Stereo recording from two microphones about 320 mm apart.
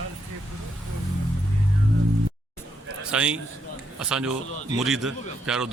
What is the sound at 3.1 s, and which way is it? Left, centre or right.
Speech, centre.